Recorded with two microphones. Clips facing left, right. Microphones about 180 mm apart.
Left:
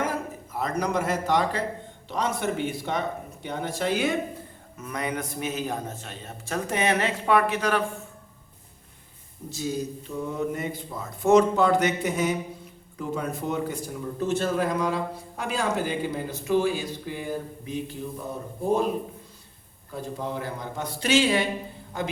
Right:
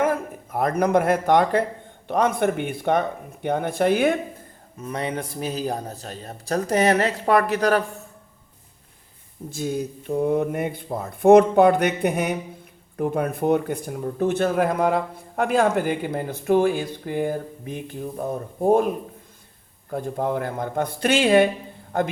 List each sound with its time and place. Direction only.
0.0 s a man's voice: 55° right (ahead or behind)
4.8 s a man's voice: 30° right (ahead or behind)
9.5 s a man's voice: 55° right (ahead or behind)
19.9 s a man's voice: 55° right (ahead or behind)